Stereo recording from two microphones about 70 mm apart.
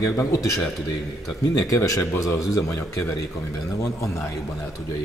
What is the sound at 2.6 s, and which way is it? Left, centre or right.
Speech, left.